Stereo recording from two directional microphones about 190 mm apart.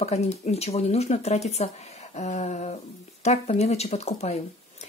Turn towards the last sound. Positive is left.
turn(degrees=35)  # may be behind; listen again after turning